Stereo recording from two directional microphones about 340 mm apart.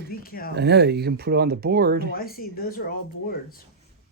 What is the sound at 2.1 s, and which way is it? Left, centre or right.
Speech, left.